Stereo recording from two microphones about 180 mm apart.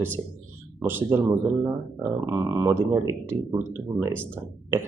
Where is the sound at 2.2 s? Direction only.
15° right (ahead or behind).